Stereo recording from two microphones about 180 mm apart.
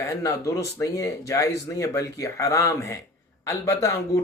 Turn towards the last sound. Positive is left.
turn(degrees=15)  # may be behind; listen again after turning